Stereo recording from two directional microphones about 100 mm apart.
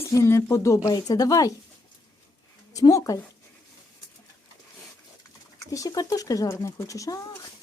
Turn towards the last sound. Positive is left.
turn(degrees=35)  # may be behind; listen again after turning